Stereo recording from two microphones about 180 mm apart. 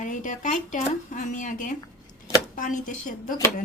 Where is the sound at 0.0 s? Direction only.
45° left (ahead or behind).